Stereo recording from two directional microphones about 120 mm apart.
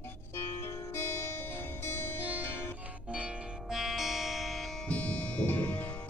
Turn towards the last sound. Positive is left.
turn(degrees=15)  # may be behind; listen again after turning